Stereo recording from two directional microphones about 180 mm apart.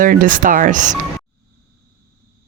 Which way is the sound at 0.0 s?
50° right (ahead or behind).